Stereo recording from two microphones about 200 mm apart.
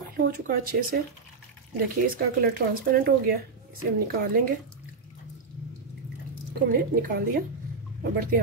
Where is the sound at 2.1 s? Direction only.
50° right (ahead or behind).